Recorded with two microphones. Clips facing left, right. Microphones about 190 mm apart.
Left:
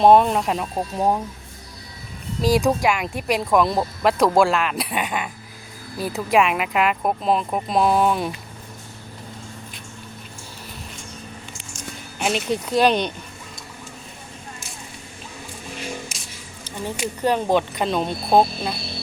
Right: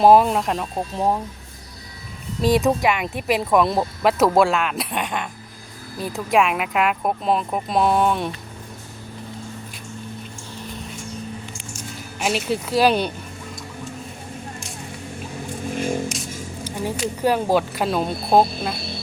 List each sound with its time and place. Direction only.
0.0 s speech: 5° right (ahead or behind)
2.4 s speech: centre (ahead or behind)
12.2 s speech: 5° right (ahead or behind)
15.7 s a sound: 50° right (ahead or behind)
17.2 s speech: 10° right (ahead or behind)